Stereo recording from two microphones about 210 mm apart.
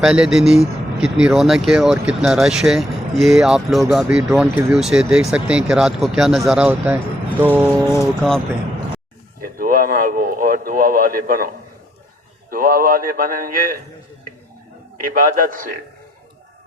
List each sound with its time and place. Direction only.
0.0 s speech: 5° right (ahead or behind)
7.4 s a sound: 10° right (ahead or behind)
7.9 s speech: 10° left (ahead or behind)
9.4 s a sound: 40° right (ahead or behind)
12.5 s a man's voice: 45° right (ahead or behind)
15.0 s a man's voice: 40° right (ahead or behind)